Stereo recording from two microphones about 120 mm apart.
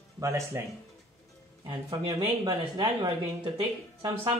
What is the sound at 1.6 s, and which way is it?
Speech, 45° right (ahead or behind).